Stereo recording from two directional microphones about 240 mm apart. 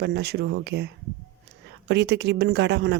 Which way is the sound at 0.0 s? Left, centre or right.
Right.